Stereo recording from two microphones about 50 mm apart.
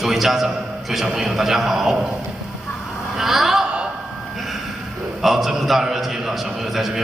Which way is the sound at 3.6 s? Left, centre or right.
Centre.